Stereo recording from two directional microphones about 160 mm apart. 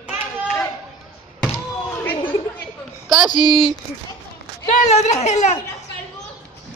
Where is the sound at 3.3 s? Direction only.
25° left (ahead or behind).